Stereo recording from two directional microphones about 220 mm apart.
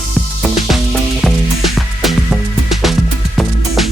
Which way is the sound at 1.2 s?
Centre (ahead or behind).